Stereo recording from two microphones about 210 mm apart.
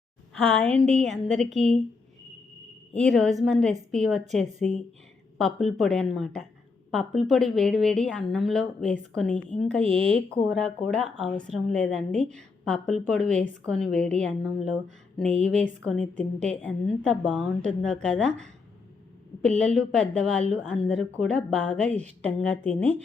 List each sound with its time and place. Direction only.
0.6 s a woman's voice: 5° left (ahead or behind)
2.9 s a woman's voice: 5° left (ahead or behind)
19.5 s a woman's voice: 5° left (ahead or behind)
22.8 s speech: 30° right (ahead or behind)